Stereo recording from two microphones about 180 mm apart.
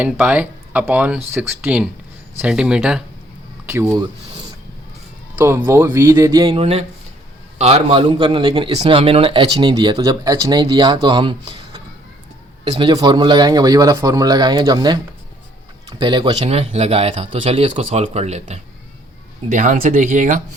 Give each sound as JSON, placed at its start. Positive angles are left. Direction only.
{"t": 0.0, "sound": "speech", "side_deg": -5}
{"t": 5.4, "sound": "speech", "side_deg": -15}
{"t": 6.6, "sound": "speech", "side_deg": -35}